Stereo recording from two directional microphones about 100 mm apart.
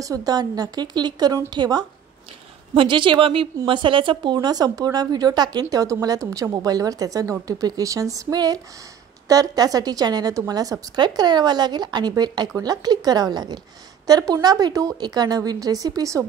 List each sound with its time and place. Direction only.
0.0 s a woman's voice: 35° right (ahead or behind)
2.7 s a woman's voice: 60° right (ahead or behind); by 16.3 s 35° right (ahead or behind)